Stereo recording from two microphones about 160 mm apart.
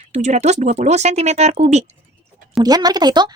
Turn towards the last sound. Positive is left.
turn(degrees=-25)  # may be behind; listen again after turning